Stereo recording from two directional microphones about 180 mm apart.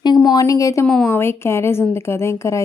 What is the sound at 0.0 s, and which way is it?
A woman's voice, 20° left (ahead or behind).